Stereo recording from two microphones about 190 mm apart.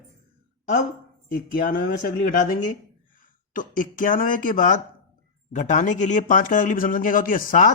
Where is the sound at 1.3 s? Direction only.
50° left (ahead or behind).